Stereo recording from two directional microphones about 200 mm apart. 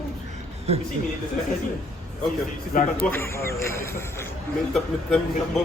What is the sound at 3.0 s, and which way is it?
Speech, 10° left (ahead or behind).